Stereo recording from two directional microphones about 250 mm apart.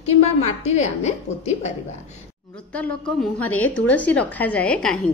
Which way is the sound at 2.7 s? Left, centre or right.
Centre.